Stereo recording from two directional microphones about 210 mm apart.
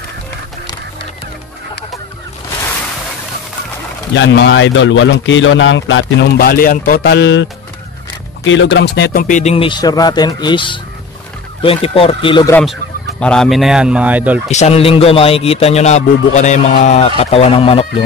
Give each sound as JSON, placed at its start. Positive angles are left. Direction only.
{"t": 4.2, "sound": "a man's voice", "side_deg": 60}
{"t": 6.4, "sound": "speech", "side_deg": 45}
{"t": 8.5, "sound": "a man's voice", "side_deg": 60}
{"t": 13.2, "sound": "a man's voice", "side_deg": 5}
{"t": 14.5, "sound": "a man's voice", "side_deg": 30}